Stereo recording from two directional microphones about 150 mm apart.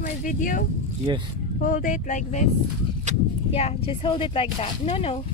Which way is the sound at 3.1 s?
50° right (ahead or behind).